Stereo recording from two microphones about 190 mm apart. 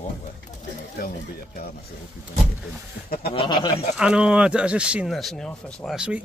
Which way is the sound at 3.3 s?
25° left (ahead or behind).